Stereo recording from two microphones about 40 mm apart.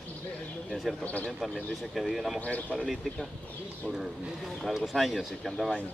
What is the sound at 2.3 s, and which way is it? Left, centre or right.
Speech, left.